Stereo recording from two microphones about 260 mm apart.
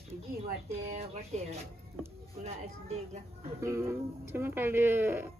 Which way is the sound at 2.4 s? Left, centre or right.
Right.